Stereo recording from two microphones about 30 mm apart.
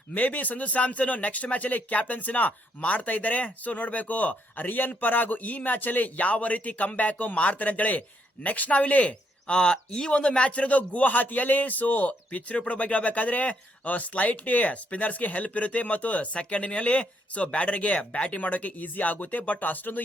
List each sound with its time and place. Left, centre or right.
0.1 s speech: left
7.3 s speech: left
9.5 s speech: left
10.5 s speech: left